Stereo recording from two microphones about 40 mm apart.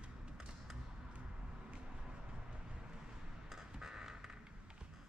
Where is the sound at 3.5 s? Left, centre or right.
Centre.